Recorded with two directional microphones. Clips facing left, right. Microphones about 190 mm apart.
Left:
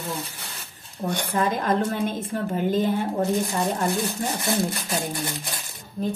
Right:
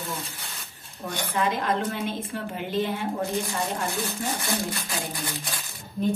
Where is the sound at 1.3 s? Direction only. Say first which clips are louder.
Left 2 dB; 45° left (ahead or behind).